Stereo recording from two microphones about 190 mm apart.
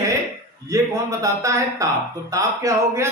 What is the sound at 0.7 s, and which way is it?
Speech, 15° right (ahead or behind).